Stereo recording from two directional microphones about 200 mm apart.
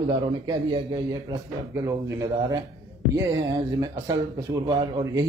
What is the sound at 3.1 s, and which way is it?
A man's voice, 15° right (ahead or behind).